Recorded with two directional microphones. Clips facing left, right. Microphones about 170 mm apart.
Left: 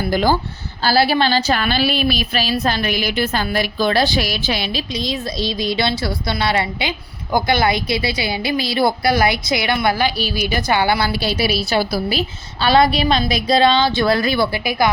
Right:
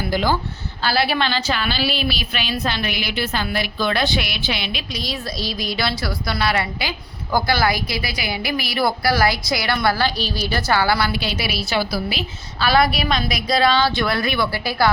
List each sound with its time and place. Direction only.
0.1 s speech: 45° left (ahead or behind)
0.9 s a woman's voice: 35° left (ahead or behind)
4.9 s a woman's voice: 25° left (ahead or behind)
11.1 s a woman's voice: 35° left (ahead or behind)
12.6 s a woman's voice: 25° left (ahead or behind)
14.5 s a woman's voice: 15° left (ahead or behind)